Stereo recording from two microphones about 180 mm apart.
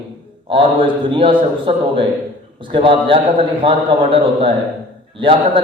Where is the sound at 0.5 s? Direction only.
30° right (ahead or behind).